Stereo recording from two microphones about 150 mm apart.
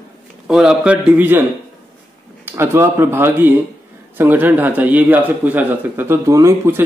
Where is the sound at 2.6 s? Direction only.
15° right (ahead or behind).